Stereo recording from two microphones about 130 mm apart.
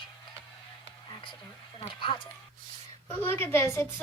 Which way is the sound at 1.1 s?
40° left (ahead or behind).